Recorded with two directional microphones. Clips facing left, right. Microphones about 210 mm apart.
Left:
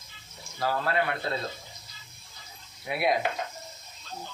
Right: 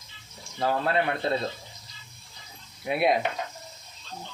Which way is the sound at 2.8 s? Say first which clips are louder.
Right 3 dB; 25° right (ahead or behind).